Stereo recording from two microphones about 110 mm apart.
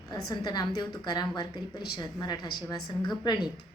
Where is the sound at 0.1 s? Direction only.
40° left (ahead or behind).